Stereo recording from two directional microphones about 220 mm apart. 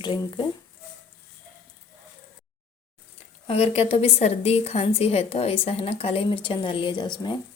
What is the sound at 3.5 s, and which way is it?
A woman's voice, 25° left (ahead or behind).